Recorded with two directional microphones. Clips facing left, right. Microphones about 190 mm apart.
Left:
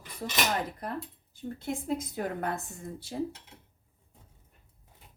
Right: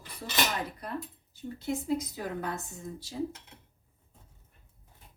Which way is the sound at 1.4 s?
50° left (ahead or behind).